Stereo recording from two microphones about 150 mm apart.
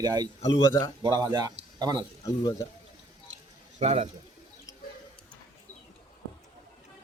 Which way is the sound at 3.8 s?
45° right (ahead or behind).